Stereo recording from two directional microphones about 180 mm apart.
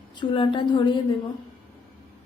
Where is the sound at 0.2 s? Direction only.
25° left (ahead or behind).